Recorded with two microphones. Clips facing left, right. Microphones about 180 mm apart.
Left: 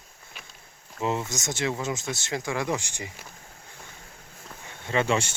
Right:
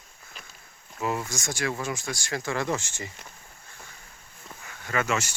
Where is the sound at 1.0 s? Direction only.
25° left (ahead or behind).